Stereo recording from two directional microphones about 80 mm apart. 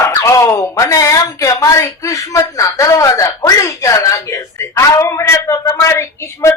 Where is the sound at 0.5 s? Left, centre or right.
Left.